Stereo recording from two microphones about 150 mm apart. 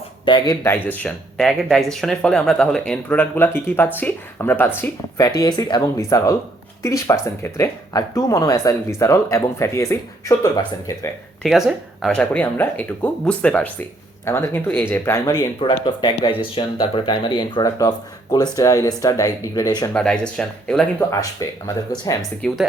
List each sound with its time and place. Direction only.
0.3 s speech: 30° left (ahead or behind)
0.6 s speech: 15° left (ahead or behind)
11.4 s speech: centre (ahead or behind); by 19.9 s 25° left (ahead or behind)
19.9 s speech: 5° left (ahead or behind)
21.4 s speech: 25° left (ahead or behind)
22.2 s speech: centre (ahead or behind)